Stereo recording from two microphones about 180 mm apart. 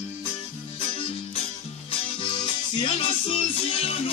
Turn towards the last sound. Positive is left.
turn(degrees=30)  # may be behind; listen again after turning